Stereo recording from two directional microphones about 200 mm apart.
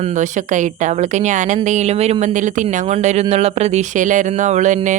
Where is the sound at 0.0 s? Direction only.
40° right (ahead or behind).